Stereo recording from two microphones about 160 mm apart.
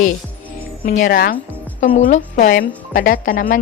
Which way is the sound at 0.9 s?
60° left (ahead or behind).